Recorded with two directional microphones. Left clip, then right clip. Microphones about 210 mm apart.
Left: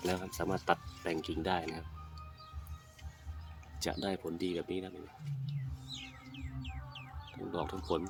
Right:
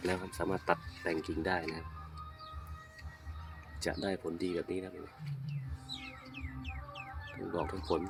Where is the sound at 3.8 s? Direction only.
10° left (ahead or behind).